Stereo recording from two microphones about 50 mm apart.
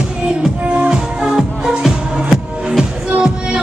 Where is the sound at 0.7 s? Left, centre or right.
Centre.